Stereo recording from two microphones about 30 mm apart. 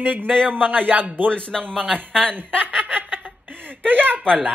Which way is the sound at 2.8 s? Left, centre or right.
Right.